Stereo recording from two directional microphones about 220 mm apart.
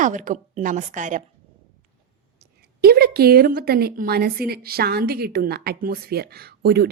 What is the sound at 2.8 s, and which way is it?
A woman's voice, 45° right (ahead or behind).